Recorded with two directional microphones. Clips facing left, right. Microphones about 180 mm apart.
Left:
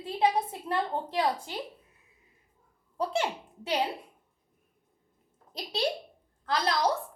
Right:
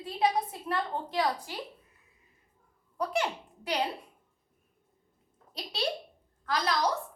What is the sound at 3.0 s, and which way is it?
Speech, 25° left (ahead or behind).